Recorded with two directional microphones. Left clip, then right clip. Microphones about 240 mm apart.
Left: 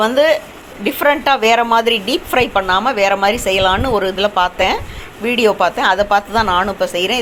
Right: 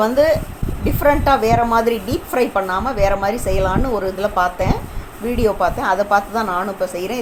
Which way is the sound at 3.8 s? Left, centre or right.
Left.